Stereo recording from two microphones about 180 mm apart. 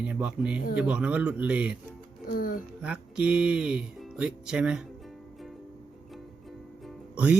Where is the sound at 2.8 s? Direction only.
5° right (ahead or behind).